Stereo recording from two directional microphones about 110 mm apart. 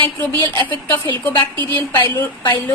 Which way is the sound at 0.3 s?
40° right (ahead or behind).